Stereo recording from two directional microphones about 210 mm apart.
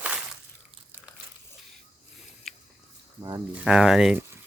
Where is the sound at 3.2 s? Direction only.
15° right (ahead or behind).